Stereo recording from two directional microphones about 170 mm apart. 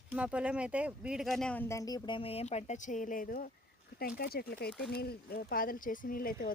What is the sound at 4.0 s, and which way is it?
Speech, 65° left (ahead or behind).